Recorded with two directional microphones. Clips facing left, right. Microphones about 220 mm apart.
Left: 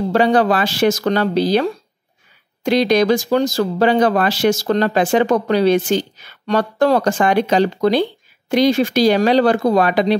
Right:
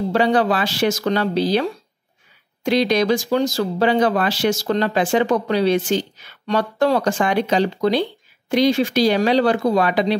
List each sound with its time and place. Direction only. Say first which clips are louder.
0.1 s speech: left 3 dB; 45° left (ahead or behind)